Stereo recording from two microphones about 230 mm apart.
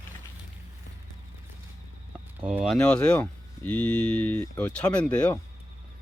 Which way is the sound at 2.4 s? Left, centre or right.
Centre.